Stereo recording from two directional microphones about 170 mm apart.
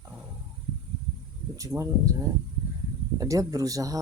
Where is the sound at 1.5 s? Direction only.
20° right (ahead or behind).